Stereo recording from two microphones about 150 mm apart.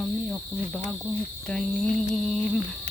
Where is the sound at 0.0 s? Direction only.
Centre (ahead or behind).